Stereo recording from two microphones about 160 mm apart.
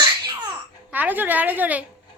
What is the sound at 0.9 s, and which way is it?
Speech, 10° right (ahead or behind).